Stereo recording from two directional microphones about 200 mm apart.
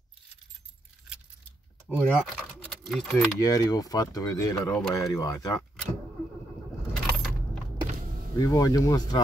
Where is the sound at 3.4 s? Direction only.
20° left (ahead or behind).